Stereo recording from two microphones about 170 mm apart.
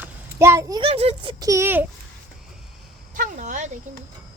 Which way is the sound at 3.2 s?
50° right (ahead or behind).